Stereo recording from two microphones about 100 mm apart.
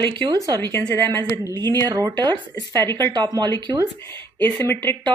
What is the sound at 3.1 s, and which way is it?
Speech, 45° right (ahead or behind).